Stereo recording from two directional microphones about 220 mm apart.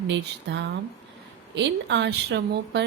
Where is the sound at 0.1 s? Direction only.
55° right (ahead or behind).